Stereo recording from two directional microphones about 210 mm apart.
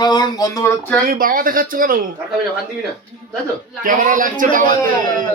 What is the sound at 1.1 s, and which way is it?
Speech, 40° right (ahead or behind).